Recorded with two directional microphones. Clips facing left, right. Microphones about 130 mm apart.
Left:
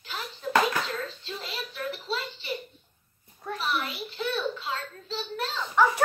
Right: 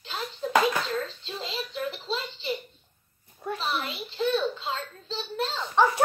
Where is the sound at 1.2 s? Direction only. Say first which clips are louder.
Right 2 dB; 25° right (ahead or behind).